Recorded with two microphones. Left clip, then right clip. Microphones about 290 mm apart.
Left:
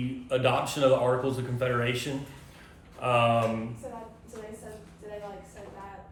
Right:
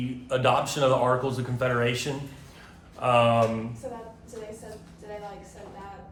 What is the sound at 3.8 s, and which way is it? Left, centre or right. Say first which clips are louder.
Speech: right 3 dB; right.